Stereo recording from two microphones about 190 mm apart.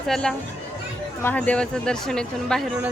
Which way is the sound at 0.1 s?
Centre (ahead or behind).